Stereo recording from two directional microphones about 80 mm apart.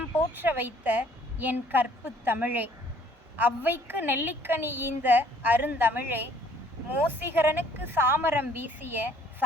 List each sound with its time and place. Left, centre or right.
0.3 s a woman's voice: right